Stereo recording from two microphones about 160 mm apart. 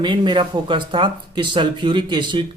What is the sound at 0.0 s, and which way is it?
Speech, 30° right (ahead or behind).